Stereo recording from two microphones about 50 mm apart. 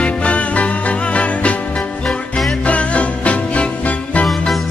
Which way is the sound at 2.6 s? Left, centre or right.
Left.